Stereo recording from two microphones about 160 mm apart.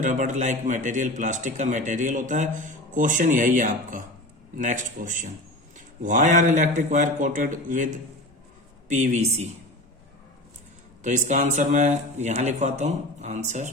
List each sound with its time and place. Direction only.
0.0 s a man's voice: 50° right (ahead or behind)
11.0 s a man's voice: 50° right (ahead or behind)